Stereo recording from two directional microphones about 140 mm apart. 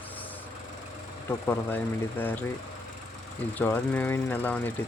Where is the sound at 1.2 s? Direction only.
15° left (ahead or behind).